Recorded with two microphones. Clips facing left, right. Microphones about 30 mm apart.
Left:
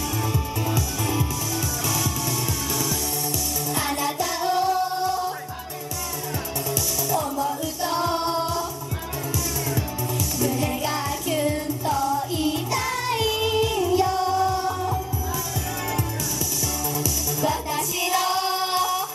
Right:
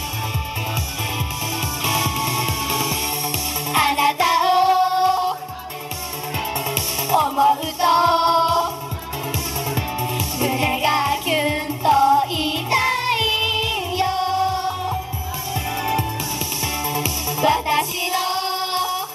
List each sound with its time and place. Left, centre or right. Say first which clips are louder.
1.9 s music: right 7 dB; right
6.7 s music: right 4 dB; right
10.4 s music: right 6 dB; right
16.8 s music: right 3 dB; right
18.1 s music: even; right